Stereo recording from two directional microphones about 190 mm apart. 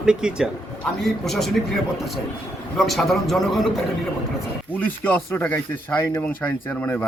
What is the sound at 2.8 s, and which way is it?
Speech, centre (ahead or behind).